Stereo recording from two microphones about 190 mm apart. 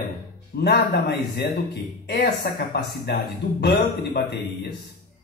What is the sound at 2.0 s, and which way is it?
A man's voice, 60° left (ahead or behind).